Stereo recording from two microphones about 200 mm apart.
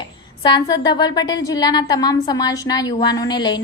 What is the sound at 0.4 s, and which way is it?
A woman's voice, 20° left (ahead or behind).